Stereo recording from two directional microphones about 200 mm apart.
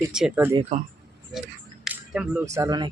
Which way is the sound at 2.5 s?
15° right (ahead or behind).